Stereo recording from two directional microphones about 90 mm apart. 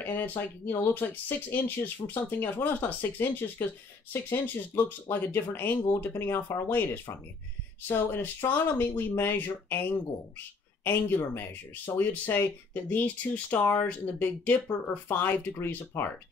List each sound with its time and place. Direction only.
0.0 s speech: 20° left (ahead or behind)